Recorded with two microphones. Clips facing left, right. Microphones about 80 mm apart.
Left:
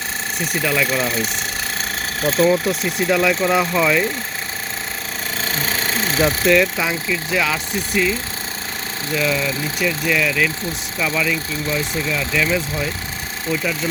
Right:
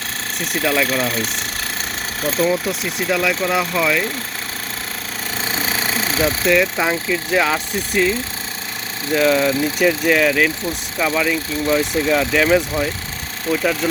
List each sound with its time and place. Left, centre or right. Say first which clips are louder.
0.5 s speech: right 2 dB; centre
5.5 s a sound: right 1 dB; centre
6.2 s speech: left 1 dB; centre
6.7 s speech: right 2 dB; right
9.1 s speech: right 6 dB; right
11.0 s speech: right 2 dB; right
11.8 s speech: right 5 dB; right